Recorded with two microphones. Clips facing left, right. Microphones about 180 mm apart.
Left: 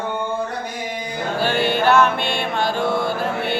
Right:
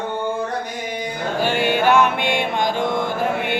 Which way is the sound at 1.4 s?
15° right (ahead or behind).